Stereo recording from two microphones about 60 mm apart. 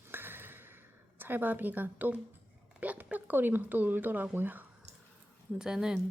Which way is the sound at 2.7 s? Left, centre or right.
Right.